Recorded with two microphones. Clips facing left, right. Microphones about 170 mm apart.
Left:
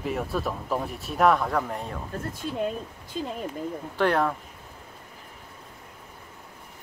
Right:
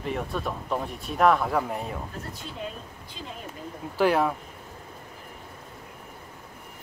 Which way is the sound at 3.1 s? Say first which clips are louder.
Left 10 dB; 50° left (ahead or behind).